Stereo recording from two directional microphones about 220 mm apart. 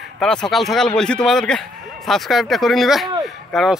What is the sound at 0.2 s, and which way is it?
Speech, centre (ahead or behind).